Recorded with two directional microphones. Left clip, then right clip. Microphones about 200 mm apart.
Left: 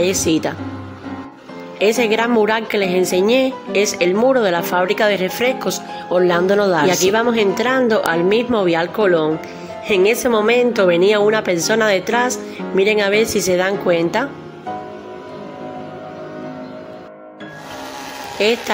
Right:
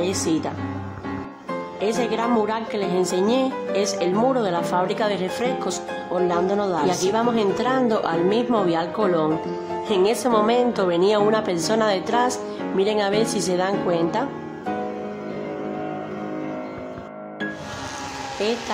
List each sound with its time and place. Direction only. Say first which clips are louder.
0.0 s a woman's voice: left 6 dB; 15° left (ahead or behind)
1.8 s a woman's voice: left 8 dB; 20° left (ahead or behind)
18.4 s a woman's voice: left 8 dB; 20° left (ahead or behind)